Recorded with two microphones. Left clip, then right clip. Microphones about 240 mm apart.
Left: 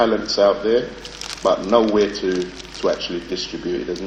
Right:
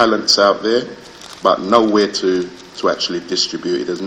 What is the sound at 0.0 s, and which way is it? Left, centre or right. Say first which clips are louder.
Speech: right 4 dB; right.